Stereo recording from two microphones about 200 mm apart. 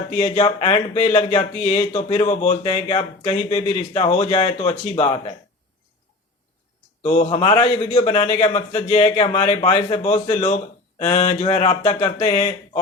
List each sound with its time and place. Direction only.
0.2 s speech: 30° left (ahead or behind)
7.0 s speech: 35° left (ahead or behind)